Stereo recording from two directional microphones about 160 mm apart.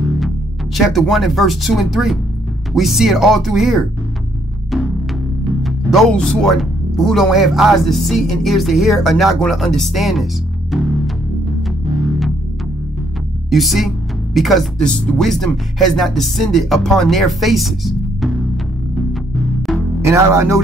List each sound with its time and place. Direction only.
0.7 s speech: centre (ahead or behind)
5.6 s speech: centre (ahead or behind)
13.5 s speech: centre (ahead or behind)
20.1 s speech: 20° right (ahead or behind)